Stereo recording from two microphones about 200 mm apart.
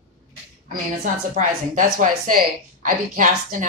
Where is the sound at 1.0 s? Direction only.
40° right (ahead or behind).